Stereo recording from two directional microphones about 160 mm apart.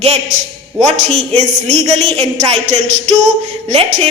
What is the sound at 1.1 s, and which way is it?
Speech, 45° right (ahead or behind).